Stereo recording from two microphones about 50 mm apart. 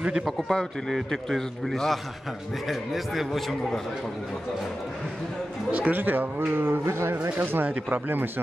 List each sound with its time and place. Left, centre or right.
0.0 s a man's voice: centre
0.5 s a man's voice: centre
5.7 s speech: right
5.9 s speech: right